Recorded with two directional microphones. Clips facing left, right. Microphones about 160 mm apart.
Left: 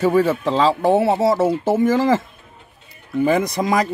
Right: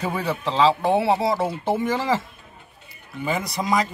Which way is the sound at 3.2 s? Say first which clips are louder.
Left 8 dB; 45° left (ahead or behind).